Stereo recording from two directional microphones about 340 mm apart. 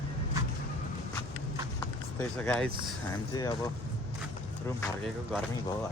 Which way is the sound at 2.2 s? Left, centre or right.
Centre.